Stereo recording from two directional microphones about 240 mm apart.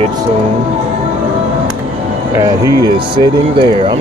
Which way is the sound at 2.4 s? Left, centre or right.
Centre.